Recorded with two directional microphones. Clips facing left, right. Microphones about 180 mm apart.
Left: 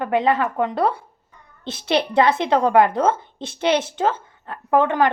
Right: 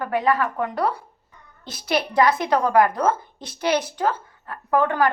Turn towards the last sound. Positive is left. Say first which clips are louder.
# left 2 dB
turn(degrees=20)  # may be behind; listen again after turning